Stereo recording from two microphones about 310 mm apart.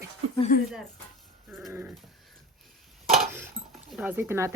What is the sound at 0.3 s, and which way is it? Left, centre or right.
Speech, left.